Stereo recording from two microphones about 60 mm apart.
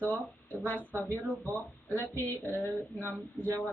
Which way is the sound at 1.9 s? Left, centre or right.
Left.